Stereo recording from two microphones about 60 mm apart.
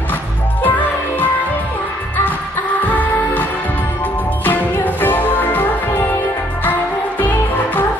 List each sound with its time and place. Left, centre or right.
0.6 s music: left
2.8 s music: left
4.5 s music: left